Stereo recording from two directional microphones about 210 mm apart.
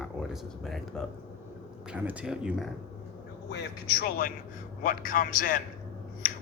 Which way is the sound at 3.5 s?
50° left (ahead or behind).